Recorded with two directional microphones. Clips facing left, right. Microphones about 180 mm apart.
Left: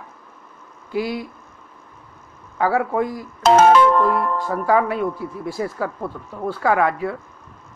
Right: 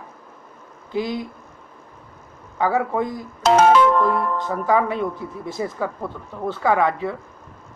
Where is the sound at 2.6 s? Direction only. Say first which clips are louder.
Left 1 dB; 20° right (ahead or behind).